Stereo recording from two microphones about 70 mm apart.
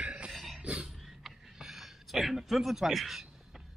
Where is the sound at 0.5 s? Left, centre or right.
Centre.